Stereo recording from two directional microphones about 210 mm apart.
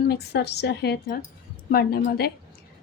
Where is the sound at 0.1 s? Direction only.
50° left (ahead or behind).